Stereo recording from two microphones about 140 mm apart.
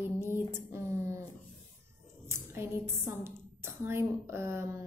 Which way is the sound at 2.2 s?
20° right (ahead or behind).